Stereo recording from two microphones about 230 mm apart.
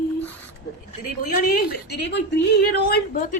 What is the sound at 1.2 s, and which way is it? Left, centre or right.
A woman's voice, left.